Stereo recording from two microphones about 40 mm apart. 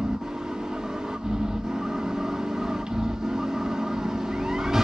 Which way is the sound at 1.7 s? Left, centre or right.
Centre.